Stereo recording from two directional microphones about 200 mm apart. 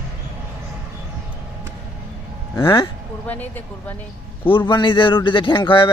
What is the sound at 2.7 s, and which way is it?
Speech, 10° left (ahead or behind).